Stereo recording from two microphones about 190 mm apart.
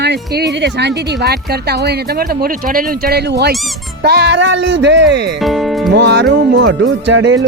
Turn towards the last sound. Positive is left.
turn(degrees=-75)  # may be behind; listen again after turning